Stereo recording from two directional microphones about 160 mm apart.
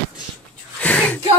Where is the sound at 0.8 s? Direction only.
10° left (ahead or behind).